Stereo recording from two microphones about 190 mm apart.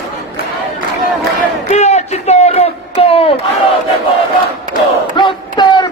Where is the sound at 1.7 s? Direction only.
35° left (ahead or behind).